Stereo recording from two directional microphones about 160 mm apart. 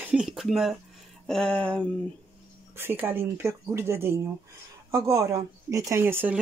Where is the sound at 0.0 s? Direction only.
5° right (ahead or behind).